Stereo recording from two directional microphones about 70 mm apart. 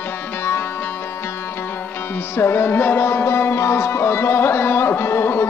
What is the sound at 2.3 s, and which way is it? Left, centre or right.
Music, left.